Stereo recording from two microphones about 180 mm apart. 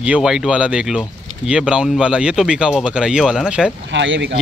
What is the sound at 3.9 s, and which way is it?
Speech, 85° right.